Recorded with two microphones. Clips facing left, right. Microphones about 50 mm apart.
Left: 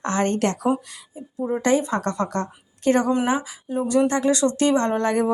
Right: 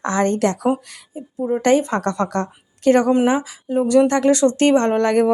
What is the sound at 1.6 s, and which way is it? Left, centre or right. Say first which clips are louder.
Speech: right 4 dB; right.